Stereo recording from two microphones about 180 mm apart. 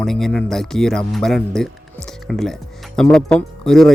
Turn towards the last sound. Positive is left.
turn(degrees=0)  # may be behind; listen again after turning